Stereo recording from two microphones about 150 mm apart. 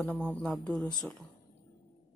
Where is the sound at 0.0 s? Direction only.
10° left (ahead or behind).